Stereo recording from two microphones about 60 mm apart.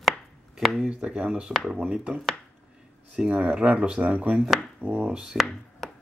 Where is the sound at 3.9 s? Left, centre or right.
Right.